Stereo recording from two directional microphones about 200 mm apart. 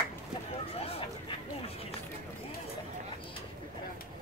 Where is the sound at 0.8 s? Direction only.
30° left (ahead or behind).